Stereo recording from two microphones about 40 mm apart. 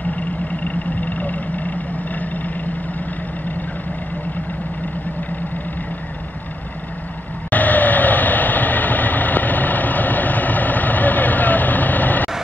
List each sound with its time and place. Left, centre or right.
0.7 s vehicle: left
7.5 s vehicle: left